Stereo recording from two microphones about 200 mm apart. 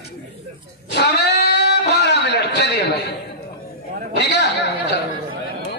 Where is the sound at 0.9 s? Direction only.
55° left (ahead or behind).